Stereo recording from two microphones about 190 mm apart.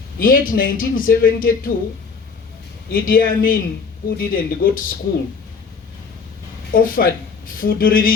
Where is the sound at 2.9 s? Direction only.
50° left (ahead or behind).